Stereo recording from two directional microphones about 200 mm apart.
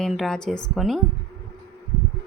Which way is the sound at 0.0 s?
Centre (ahead or behind).